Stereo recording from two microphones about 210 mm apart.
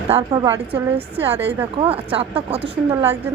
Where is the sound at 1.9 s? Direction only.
25° right (ahead or behind).